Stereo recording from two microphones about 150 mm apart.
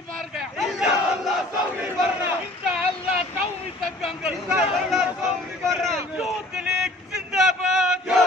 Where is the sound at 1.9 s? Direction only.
10° right (ahead or behind).